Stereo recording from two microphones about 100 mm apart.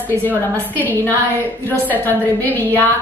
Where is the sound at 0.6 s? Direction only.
20° left (ahead or behind).